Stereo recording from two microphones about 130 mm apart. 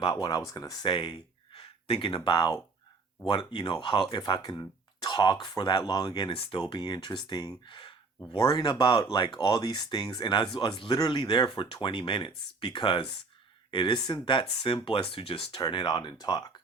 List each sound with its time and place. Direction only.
0.0 s speech: 35° left (ahead or behind)
6.6 s speech: 30° left (ahead or behind)
15.5 s speech: 35° left (ahead or behind)